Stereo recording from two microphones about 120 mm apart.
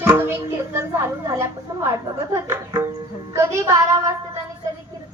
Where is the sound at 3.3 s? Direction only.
25° right (ahead or behind).